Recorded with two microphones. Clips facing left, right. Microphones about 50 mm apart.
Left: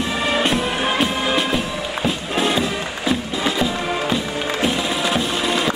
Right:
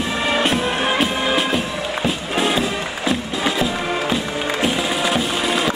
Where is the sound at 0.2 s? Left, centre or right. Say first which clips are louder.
Right 1 dB; centre.